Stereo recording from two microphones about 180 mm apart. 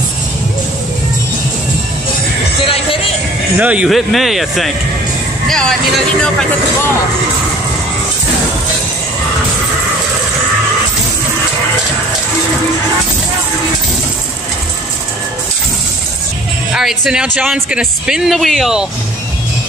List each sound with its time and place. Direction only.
2.6 s music: 30° left (ahead or behind)
3.5 s a man's voice: 5° right (ahead or behind)
16.7 s a man's voice: 5° right (ahead or behind)